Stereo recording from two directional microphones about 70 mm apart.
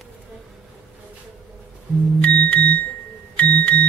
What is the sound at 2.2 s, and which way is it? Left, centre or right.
Music, left.